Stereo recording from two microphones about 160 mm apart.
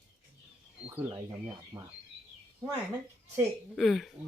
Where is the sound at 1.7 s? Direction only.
25° right (ahead or behind).